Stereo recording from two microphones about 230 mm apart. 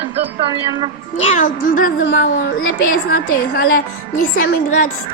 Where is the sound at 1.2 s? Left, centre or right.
Left.